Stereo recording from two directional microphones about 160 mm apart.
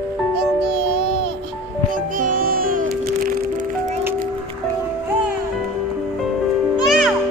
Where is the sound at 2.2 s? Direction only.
60° right (ahead or behind).